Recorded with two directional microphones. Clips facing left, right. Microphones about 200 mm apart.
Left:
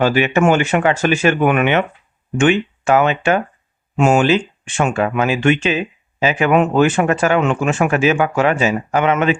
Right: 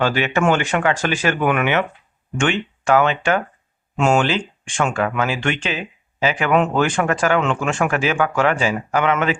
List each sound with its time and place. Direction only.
0.0 s speech: 15° left (ahead or behind)